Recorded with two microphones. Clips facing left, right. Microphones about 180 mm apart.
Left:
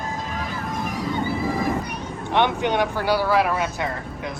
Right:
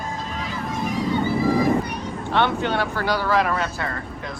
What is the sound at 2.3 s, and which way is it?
Speech, 15° left (ahead or behind).